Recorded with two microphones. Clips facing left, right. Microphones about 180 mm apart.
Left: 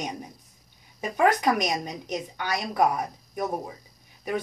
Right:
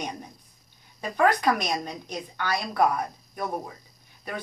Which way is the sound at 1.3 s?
15° left (ahead or behind).